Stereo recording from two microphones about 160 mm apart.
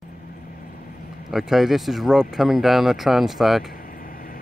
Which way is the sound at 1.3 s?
Centre (ahead or behind).